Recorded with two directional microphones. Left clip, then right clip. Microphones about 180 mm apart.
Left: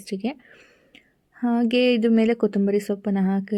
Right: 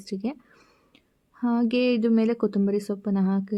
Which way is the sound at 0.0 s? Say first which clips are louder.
Left 3 dB; 25° left (ahead or behind).